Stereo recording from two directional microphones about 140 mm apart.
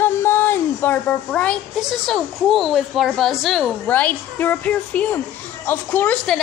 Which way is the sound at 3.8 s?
10° left (ahead or behind).